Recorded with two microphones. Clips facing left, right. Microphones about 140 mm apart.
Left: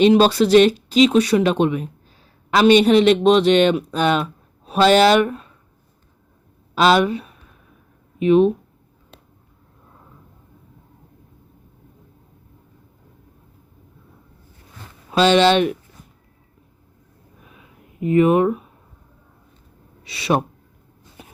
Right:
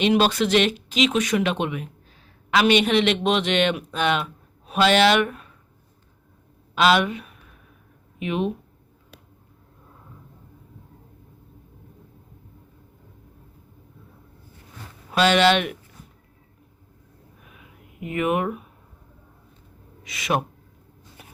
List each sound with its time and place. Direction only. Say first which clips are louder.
0.0 s speech: left 6 dB; 35° left (ahead or behind)
6.7 s speech: left 4 dB; 35° left (ahead or behind)
15.1 s speech: left 4 dB; 25° left (ahead or behind)
18.0 s speech: left 9 dB; 35° left (ahead or behind)
20.1 s speech: left 5 dB; 30° left (ahead or behind)
21.2 s a sound: left 5 dB; 20° left (ahead or behind)